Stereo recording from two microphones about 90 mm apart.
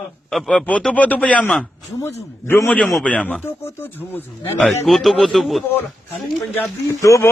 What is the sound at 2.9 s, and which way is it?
Speech, 15° left (ahead or behind).